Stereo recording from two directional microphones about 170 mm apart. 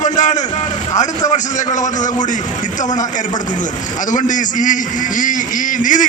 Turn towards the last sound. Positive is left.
turn(degrees=50)  # may be behind; listen again after turning